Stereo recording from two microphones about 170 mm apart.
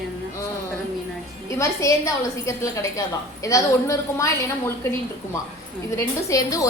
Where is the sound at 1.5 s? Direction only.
20° left (ahead or behind).